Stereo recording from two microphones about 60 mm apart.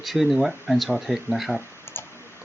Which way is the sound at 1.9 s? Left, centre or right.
Left.